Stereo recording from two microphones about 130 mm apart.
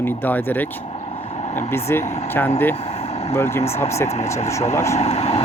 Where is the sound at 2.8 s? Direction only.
55° left (ahead or behind).